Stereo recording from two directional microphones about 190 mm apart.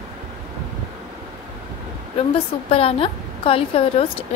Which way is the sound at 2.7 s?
30° left (ahead or behind).